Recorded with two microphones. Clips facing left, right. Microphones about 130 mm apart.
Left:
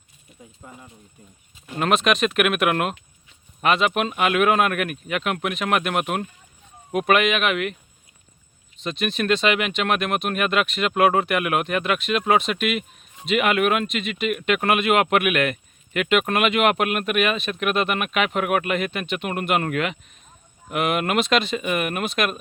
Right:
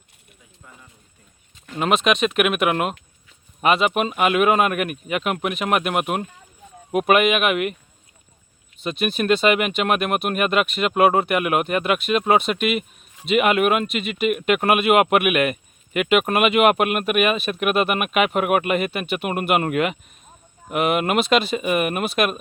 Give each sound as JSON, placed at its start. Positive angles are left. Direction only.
{"t": 0.6, "sound": "speech", "side_deg": 30}
{"t": 1.8, "sound": "speech", "side_deg": 0}
{"t": 8.8, "sound": "speech", "side_deg": -5}